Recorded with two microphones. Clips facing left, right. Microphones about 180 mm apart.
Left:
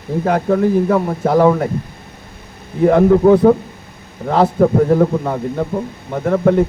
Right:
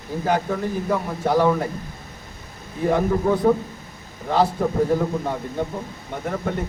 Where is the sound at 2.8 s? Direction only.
70° left (ahead or behind).